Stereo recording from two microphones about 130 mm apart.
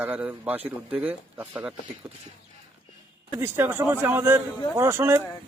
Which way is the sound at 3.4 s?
15° right (ahead or behind).